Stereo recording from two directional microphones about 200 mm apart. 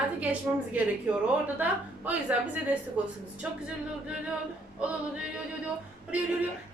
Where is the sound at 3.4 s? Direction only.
5° right (ahead or behind).